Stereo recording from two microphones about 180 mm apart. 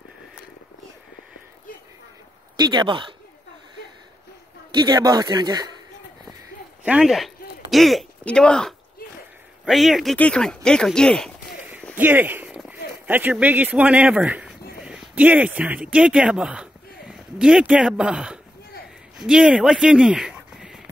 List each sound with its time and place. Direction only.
2.5 s a man's voice: 25° right (ahead or behind)
4.7 s a man's voice: 20° right (ahead or behind)
6.8 s speech: 5° right (ahead or behind)
11.9 s speech: 10° right (ahead or behind)